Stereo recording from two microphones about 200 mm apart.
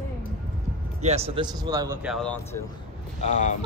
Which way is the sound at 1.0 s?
30° right (ahead or behind).